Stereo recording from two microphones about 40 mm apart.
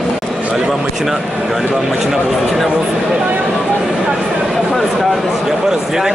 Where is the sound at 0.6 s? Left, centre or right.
Centre.